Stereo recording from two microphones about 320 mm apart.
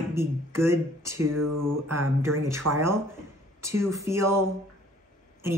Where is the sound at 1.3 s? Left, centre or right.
Right.